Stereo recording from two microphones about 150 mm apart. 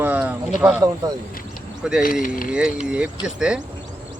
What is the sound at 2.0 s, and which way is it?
Speech, 70° left (ahead or behind).